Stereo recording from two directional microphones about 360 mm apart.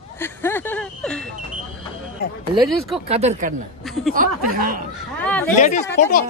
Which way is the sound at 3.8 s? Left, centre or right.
Centre.